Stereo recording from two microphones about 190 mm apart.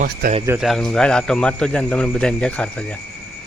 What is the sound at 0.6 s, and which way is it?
Speech, centre (ahead or behind).